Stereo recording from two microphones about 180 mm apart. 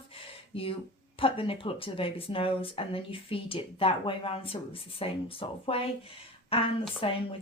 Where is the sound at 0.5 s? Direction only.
30° left (ahead or behind).